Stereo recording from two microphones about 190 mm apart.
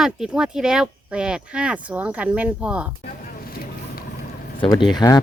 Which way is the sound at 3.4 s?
50° left (ahead or behind).